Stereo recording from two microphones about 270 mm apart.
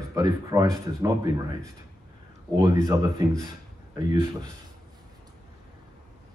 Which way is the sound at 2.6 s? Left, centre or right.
Centre.